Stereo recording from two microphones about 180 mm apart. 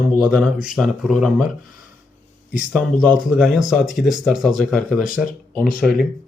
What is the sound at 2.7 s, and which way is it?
Speech, 5° right (ahead or behind).